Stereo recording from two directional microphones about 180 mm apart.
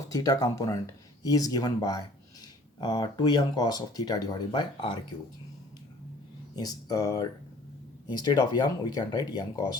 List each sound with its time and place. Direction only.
0.1 s speech: 20° left (ahead or behind)
6.6 s speech: 20° left (ahead or behind)